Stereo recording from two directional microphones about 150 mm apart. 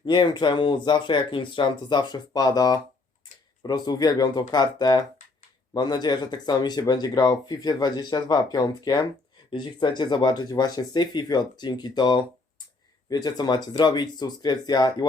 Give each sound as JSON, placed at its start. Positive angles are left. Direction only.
{"t": 0.0, "sound": "speech", "side_deg": 35}